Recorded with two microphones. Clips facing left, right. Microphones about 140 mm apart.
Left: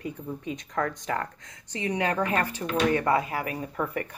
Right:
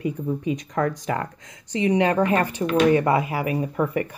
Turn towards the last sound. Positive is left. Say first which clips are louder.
# right 7 dB
turn(degrees=-15)  # may be behind; listen again after turning